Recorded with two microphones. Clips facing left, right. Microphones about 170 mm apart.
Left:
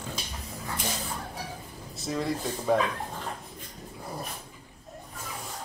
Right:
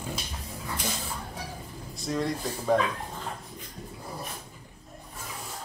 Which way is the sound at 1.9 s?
Centre (ahead or behind).